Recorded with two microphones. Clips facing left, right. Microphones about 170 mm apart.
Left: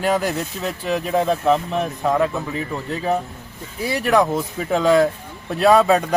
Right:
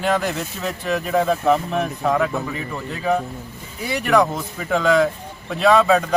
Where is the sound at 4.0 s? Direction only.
5° left (ahead or behind).